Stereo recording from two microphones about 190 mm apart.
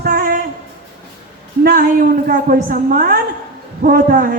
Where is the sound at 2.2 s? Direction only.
45° right (ahead or behind).